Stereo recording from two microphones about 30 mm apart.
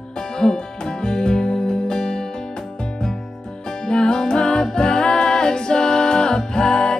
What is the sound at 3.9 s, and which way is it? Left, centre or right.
Music, left.